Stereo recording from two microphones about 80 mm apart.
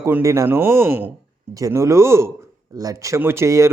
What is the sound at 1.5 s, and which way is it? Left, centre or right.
Speech, right.